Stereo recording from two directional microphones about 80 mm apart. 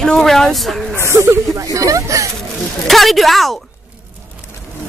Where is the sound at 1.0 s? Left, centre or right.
Right.